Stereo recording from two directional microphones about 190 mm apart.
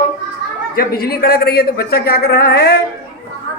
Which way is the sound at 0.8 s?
55° left (ahead or behind).